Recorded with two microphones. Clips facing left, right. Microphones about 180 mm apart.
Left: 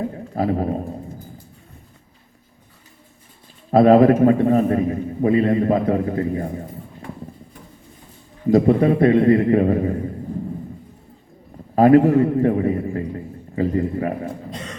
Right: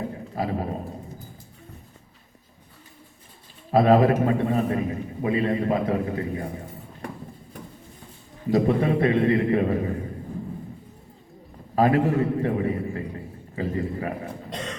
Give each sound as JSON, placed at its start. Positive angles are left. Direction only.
{"t": 0.3, "sound": "speech", "side_deg": 45}
{"t": 3.7, "sound": "a man's voice", "side_deg": 45}
{"t": 8.4, "sound": "a man's voice", "side_deg": 45}
{"t": 11.7, "sound": "a man's voice", "side_deg": 40}